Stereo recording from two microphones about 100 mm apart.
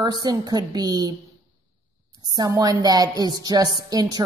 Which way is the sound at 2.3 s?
40° right (ahead or behind).